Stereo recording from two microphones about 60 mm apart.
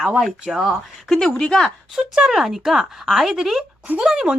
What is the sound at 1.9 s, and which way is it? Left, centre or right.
Speech, centre.